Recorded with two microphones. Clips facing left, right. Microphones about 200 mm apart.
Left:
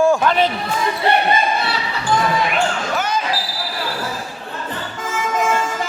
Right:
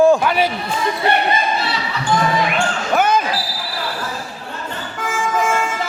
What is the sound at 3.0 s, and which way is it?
Basketball bounce, 55° right (ahead or behind).